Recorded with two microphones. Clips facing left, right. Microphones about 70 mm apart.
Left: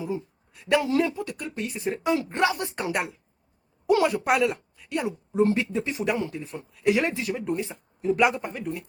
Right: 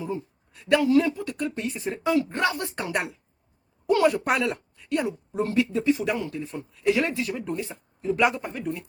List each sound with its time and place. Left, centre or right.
0.0 s a sound: centre
0.8 s speech: left
1.0 s speech: centre
1.8 s speech: centre
3.8 s a woman's voice: centre
5.5 s speech: left; by 8.8 s centre